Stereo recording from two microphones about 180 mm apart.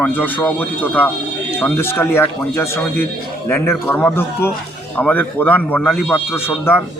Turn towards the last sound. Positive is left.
turn(degrees=10)  # may be behind; listen again after turning